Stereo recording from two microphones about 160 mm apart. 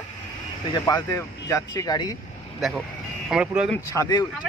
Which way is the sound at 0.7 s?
20° left (ahead or behind).